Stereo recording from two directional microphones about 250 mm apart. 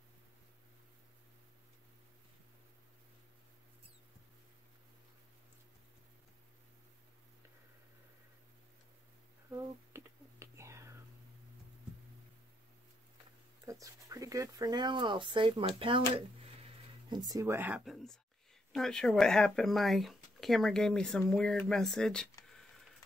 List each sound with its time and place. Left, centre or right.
9.5 s whispering: centre
13.7 s speech: centre
17.1 s speech: centre